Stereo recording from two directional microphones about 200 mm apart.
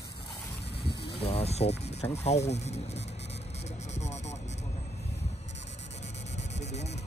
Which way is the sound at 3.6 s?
35° left (ahead or behind).